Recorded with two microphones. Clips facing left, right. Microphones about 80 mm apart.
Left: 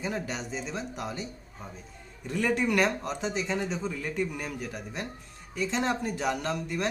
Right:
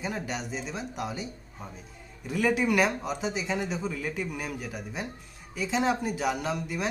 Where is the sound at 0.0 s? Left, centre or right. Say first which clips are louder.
Even; centre.